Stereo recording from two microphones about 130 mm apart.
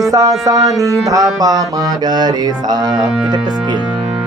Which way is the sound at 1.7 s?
30° right (ahead or behind).